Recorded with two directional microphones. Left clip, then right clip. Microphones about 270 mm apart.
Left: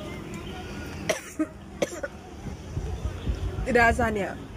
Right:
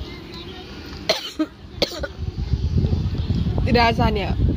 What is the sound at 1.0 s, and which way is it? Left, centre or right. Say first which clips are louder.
Cough: right 6 dB; centre.